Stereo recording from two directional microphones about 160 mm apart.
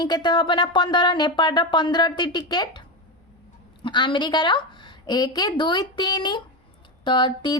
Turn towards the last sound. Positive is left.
turn(degrees=30)  # may be behind; listen again after turning